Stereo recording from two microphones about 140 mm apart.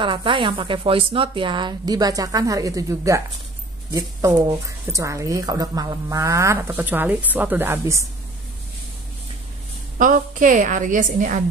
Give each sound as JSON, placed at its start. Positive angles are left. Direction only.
{"t": 0.0, "sound": "speech", "side_deg": -35}
{"t": 9.9, "sound": "a woman's voice", "side_deg": -70}